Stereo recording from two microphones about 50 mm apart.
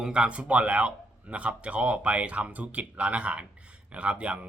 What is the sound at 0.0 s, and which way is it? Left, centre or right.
A man's voice, centre.